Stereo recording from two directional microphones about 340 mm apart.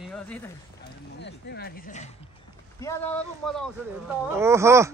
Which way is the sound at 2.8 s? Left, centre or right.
Centre.